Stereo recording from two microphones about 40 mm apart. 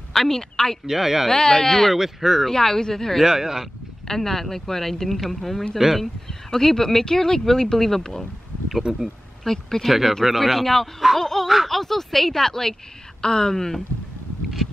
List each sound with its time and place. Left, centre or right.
0.1 s a woman's voice: centre
0.8 s speech: centre
1.3 s speech: centre
2.0 s speech: centre
2.4 s speech: centre
3.3 s speech: centre
4.1 s speech: centre
8.9 s speech: centre
9.4 s speech: centre
9.8 s speech: centre
11.4 s speech: centre
11.7 s speech: centre